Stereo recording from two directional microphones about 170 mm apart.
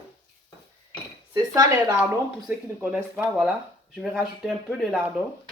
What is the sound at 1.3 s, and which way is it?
Speech, 20° right (ahead or behind).